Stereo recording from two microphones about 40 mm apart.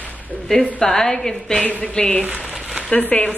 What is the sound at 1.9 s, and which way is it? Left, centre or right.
Speech, left.